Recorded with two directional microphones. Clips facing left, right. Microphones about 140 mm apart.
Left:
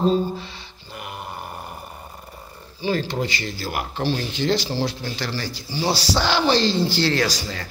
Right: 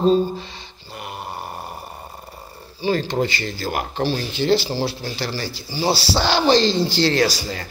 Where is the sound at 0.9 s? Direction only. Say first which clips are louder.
Right 2 dB; 25° right (ahead or behind).